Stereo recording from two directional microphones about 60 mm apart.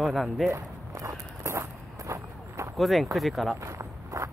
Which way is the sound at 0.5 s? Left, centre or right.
Right.